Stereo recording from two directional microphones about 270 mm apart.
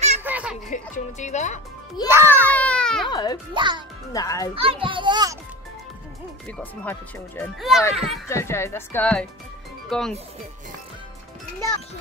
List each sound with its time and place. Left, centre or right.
0.2 s a sound: centre
0.7 s speech: left
2.0 s a child's voice: centre
2.4 s speech: centre
3.1 s speech: centre
3.5 s a child's voice: centre
4.1 s speech: centre
4.6 s a child's voice: centre
6.6 s speech: centre